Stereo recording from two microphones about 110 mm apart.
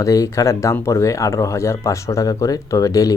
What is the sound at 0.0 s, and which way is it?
Speech, 30° left (ahead or behind).